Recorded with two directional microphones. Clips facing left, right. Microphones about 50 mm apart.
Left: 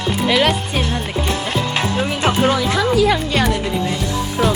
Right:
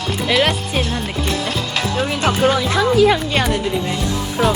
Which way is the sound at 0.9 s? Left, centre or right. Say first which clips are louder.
Left 1 dB; left.